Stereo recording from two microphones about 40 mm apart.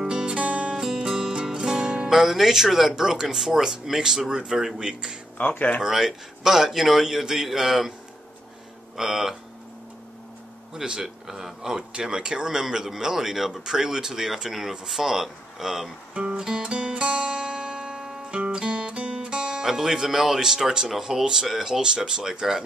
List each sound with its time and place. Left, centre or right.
0.1 s music: right
1.1 s music: centre
2.0 s speech: centre
5.4 s speech: left
5.8 s speech: centre
8.9 s speech: centre
10.7 s speech: centre
16.2 s music: centre
16.7 s guitar: right
18.5 s music: right
19.6 s speech: centre
21.8 s speech: centre